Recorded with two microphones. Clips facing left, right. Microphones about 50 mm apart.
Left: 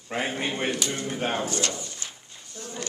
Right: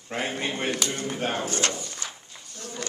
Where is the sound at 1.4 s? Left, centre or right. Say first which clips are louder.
Right 1 dB; right.